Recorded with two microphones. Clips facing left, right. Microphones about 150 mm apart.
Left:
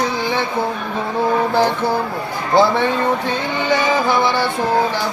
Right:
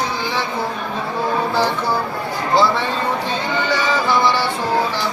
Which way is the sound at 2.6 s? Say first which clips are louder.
Left 5 dB; 55° left (ahead or behind).